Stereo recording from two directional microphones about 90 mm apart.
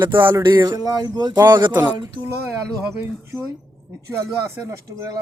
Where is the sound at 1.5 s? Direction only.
60° right (ahead or behind).